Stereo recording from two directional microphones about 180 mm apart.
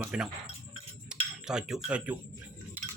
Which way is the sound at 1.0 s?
5° right (ahead or behind).